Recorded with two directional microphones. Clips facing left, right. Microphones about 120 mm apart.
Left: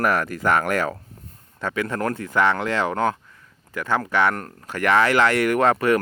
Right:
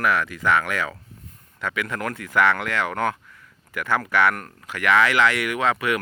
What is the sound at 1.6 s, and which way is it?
Speech, 30° left (ahead or behind).